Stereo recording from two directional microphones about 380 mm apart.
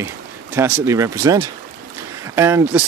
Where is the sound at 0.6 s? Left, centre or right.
Centre.